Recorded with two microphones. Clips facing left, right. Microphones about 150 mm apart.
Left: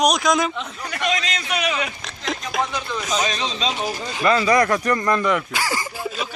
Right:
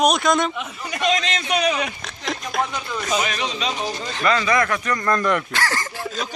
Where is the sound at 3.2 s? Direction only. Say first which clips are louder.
Left 1 dB; 20° left (ahead or behind).